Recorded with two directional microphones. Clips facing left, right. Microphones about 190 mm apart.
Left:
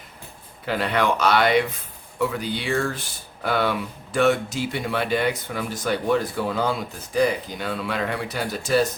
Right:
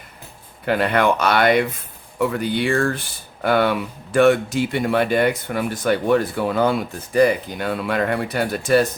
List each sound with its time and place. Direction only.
0.6 s speech: 55° right (ahead or behind)